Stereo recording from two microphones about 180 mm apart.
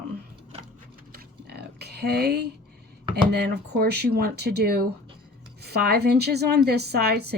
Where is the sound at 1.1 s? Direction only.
65° right (ahead or behind).